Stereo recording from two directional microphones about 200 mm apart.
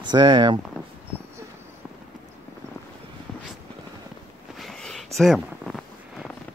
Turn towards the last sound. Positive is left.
turn(degrees=0)  # may be behind; listen again after turning